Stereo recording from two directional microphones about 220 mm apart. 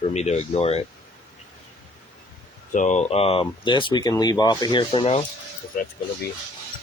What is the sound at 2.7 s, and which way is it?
Speech, 30° left (ahead or behind).